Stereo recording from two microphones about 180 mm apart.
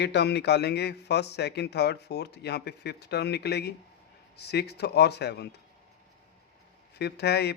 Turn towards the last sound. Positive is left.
turn(degrees=65)  # may be behind; listen again after turning